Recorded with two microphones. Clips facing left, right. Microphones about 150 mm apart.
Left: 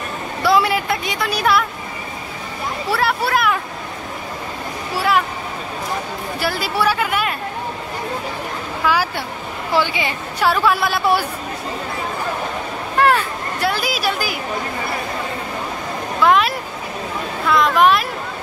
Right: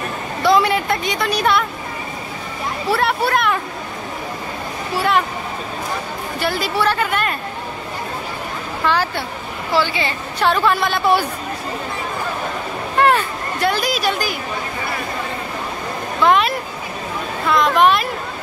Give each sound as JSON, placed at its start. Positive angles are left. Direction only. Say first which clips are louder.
{"t": 0.4, "sound": "a woman's voice", "louder": "right 1 dB", "side_deg": 5}
{"t": 2.9, "sound": "a woman's voice", "louder": "right 1 dB", "side_deg": 0}
{"t": 6.4, "sound": "a woman's voice", "louder": "right 1 dB", "side_deg": 5}
{"t": 8.8, "sound": "a woman's voice", "louder": "even", "side_deg": 10}
{"t": 12.9, "sound": "speech", "louder": "even", "side_deg": 0}
{"t": 16.2, "sound": "a woman's voice", "louder": "even", "side_deg": 0}